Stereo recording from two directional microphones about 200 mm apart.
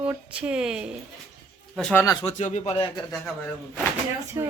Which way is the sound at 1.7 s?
5° left (ahead or behind).